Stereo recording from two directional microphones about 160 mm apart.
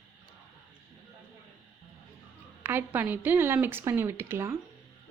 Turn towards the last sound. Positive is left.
turn(degrees=-15)  # may be behind; listen again after turning